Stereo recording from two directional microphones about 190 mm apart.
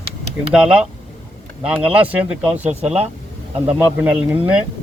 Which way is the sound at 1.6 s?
5° right (ahead or behind).